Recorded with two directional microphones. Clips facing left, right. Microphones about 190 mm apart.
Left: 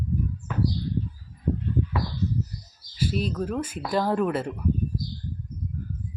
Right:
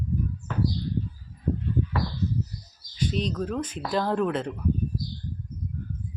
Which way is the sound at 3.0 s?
5° left (ahead or behind).